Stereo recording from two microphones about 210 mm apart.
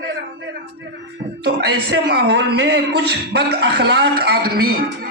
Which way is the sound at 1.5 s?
50° right (ahead or behind).